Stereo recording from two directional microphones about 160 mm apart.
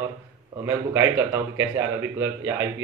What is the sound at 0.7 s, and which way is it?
A man's voice, 15° right (ahead or behind).